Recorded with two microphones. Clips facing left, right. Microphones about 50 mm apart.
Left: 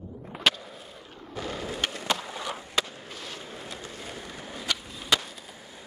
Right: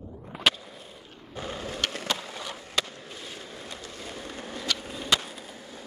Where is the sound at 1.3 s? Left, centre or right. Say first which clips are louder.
Left 1 dB; right.